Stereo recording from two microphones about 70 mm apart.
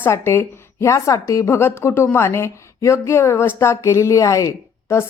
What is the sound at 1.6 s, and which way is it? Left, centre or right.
Speech, left.